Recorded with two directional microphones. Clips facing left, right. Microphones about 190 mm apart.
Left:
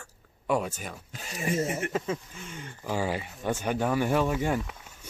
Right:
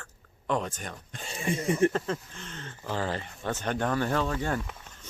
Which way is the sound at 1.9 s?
5° left (ahead or behind).